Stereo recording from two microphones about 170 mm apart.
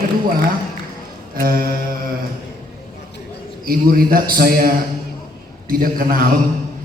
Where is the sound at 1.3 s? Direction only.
60° right (ahead or behind).